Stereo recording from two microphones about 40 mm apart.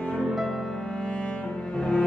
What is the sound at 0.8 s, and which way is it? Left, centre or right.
Cello, left.